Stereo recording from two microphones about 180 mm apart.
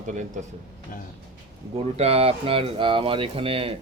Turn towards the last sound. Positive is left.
turn(degrees=-30)  # may be behind; listen again after turning